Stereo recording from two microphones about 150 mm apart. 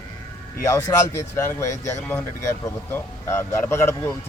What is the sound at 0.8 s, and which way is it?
A man's voice, 20° left (ahead or behind).